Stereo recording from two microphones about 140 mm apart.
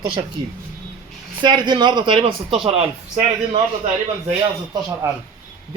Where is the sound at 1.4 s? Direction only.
35° right (ahead or behind).